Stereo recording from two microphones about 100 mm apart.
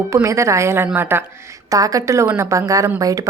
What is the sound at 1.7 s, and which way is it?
Speech, 35° right (ahead or behind).